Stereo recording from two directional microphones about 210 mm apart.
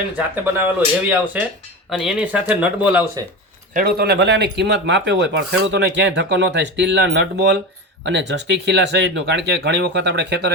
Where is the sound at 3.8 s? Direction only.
45° right (ahead or behind).